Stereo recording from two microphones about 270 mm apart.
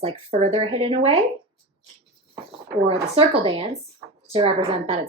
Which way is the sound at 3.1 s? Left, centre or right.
Right.